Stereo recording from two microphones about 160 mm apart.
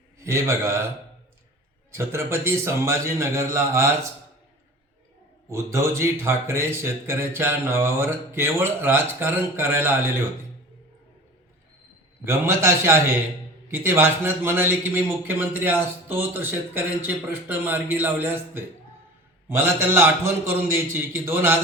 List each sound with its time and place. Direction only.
0.2 s speech: 20° right (ahead or behind)
1.9 s speech: 15° right (ahead or behind)
5.5 s speech: 15° right (ahead or behind)
12.2 s speech: 15° right (ahead or behind)